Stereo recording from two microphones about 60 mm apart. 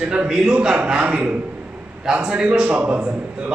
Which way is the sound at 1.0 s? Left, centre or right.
Right.